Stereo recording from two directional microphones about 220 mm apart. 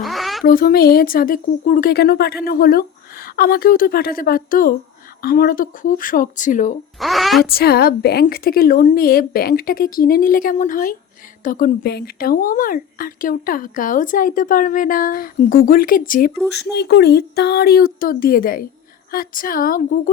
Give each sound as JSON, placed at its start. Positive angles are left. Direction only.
{"t": 0.0, "sound": "a sound", "side_deg": 0}
{"t": 0.4, "sound": "speech", "side_deg": 40}
{"t": 7.0, "sound": "a woman's voice", "side_deg": 0}
{"t": 7.4, "sound": "speech", "side_deg": 45}
{"t": 16.7, "sound": "speech", "side_deg": 50}